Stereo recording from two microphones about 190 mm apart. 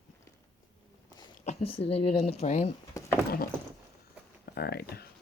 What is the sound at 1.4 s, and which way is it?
Speech, 35° left (ahead or behind).